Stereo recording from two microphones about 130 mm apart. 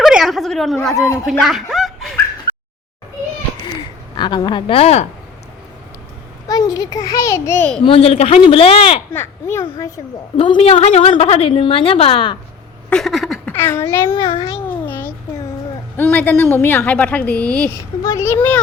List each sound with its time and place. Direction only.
0.0 s a sound: centre (ahead or behind)
1.2 s speech: centre (ahead or behind)
1.7 s a sound: centre (ahead or behind)
3.8 s speech: 35° left (ahead or behind); by 5.0 s 50° left (ahead or behind)
6.5 s a child's voice: 30° left (ahead or behind)
7.8 s a woman's voice: 45° left (ahead or behind)
9.1 s a child's voice: 20° left (ahead or behind)
10.3 s a woman's voice: 45° left (ahead or behind)
12.9 s a sound: centre (ahead or behind)
13.5 s a child's voice: 15° left (ahead or behind)
14.1 s a child's voice: 40° left (ahead or behind)
14.5 s a sound: 15° left (ahead or behind)
16.0 s a woman's voice: 15° left (ahead or behind)
18.0 s a woman's voice: 25° left (ahead or behind)